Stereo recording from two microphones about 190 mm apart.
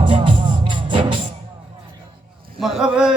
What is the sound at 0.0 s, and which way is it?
Music, 25° right (ahead or behind).